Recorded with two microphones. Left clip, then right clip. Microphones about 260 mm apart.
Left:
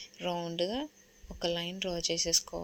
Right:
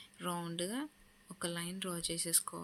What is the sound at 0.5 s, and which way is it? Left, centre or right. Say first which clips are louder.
Speech: left 8 dB; centre.